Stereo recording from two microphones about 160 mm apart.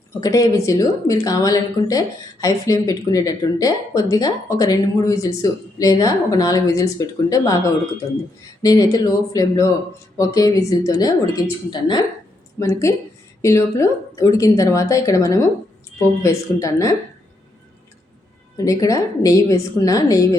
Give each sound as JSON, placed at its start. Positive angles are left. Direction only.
{"t": 0.1, "sound": "speech", "side_deg": 20}
{"t": 18.5, "sound": "speech", "side_deg": 20}